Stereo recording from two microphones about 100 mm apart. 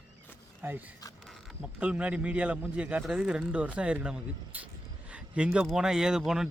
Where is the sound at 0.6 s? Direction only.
20° right (ahead or behind).